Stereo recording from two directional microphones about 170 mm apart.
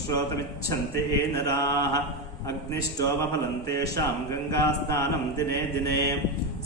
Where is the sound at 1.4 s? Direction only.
15° left (ahead or behind).